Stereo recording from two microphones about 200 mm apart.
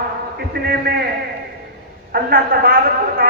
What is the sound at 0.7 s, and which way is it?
Speech, 50° right (ahead or behind).